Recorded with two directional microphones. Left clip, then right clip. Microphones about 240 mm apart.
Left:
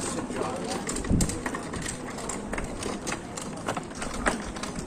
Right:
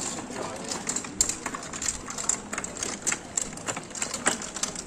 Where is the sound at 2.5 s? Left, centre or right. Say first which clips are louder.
Left 1 dB; right.